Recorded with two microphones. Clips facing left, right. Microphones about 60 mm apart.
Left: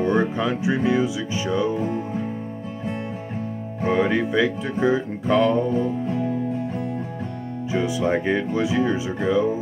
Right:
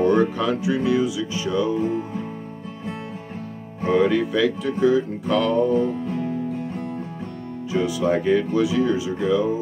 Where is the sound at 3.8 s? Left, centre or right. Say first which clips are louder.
Right 2 dB; left.